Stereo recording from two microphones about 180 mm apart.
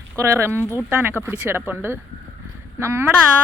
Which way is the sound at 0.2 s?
15° right (ahead or behind).